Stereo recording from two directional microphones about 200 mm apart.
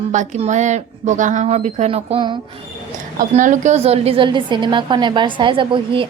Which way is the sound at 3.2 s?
40° right (ahead or behind).